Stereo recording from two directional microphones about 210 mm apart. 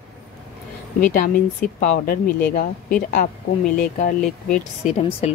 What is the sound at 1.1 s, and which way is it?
Speech, 45° left (ahead or behind).